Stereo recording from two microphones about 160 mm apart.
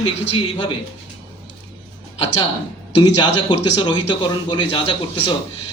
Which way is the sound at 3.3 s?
30° left (ahead or behind).